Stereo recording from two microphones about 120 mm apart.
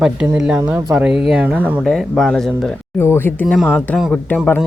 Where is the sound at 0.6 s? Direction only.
10° right (ahead or behind).